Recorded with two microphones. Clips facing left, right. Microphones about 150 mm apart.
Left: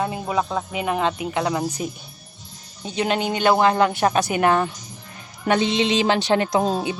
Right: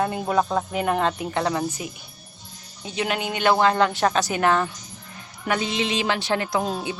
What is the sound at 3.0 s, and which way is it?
A woman's voice, 25° left (ahead or behind).